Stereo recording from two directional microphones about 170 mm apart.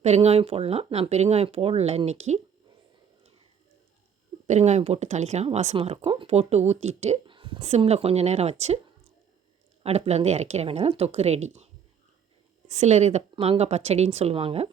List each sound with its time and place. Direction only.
0.0 s speech: 40° right (ahead or behind)
4.4 s speech: 45° right (ahead or behind)
9.8 s speech: 40° right (ahead or behind)